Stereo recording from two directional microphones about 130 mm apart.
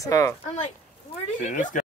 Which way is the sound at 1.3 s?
65° left (ahead or behind).